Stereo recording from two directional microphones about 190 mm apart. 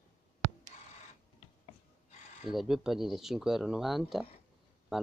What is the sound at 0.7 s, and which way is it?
Camera, 40° left (ahead or behind).